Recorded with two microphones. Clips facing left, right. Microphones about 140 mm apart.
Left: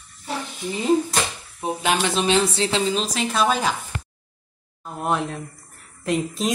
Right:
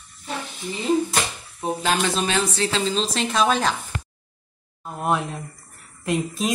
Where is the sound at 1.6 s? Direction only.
15° left (ahead or behind).